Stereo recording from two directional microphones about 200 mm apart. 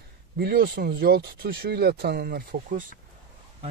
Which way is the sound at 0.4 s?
55° right (ahead or behind).